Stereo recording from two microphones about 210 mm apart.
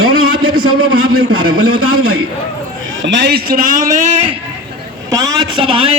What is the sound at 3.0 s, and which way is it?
A man's voice, 55° right (ahead or behind).